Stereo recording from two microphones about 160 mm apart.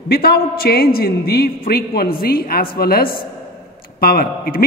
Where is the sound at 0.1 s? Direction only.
75° left (ahead or behind).